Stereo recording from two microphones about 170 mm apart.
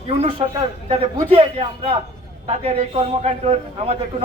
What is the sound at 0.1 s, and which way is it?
A man's voice, 40° right (ahead or behind).